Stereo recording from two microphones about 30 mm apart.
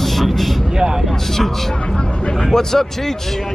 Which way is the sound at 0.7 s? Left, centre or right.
Centre.